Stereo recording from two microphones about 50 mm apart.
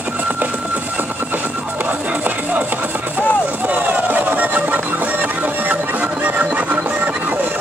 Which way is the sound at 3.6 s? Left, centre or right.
Right.